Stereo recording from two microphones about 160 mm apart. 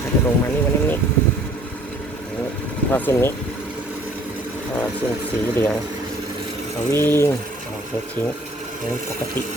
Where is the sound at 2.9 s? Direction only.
15° left (ahead or behind).